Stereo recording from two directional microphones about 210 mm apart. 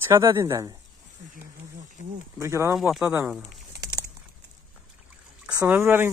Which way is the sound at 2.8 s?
Centre (ahead or behind).